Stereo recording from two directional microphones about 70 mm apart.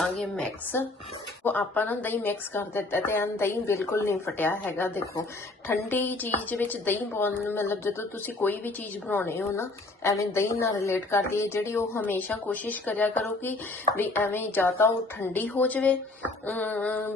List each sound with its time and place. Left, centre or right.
0.0 s a woman's voice: centre
1.5 s a woman's voice: left
4.4 s a woman's voice: left
9.6 s a woman's voice: left
12.0 s a woman's voice: left